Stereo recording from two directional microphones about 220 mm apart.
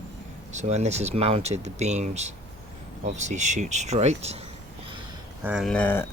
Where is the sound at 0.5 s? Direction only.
30° right (ahead or behind).